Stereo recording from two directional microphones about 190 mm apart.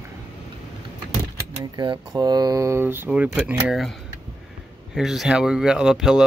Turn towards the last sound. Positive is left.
turn(degrees=0)  # may be behind; listen again after turning